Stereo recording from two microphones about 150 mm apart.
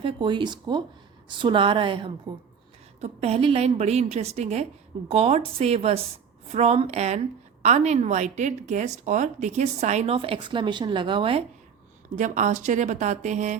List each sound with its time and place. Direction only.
0.0 s a woman's voice: 35° right (ahead or behind)
3.0 s a woman's voice: 45° right (ahead or behind)
12.1 s a woman's voice: 55° right (ahead or behind)